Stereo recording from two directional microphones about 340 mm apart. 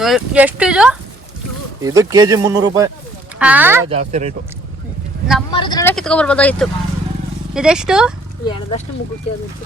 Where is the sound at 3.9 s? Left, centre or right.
Centre.